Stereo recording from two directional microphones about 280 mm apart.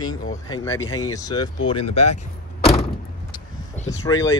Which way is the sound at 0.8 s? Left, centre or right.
Left.